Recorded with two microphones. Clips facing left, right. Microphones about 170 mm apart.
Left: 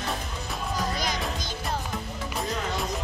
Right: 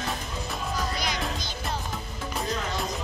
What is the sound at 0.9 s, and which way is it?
Music, 45° left (ahead or behind).